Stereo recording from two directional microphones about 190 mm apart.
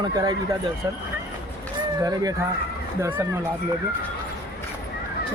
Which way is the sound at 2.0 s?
20° right (ahead or behind).